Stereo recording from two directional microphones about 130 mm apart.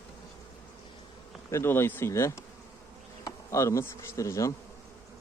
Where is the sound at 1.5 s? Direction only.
20° left (ahead or behind).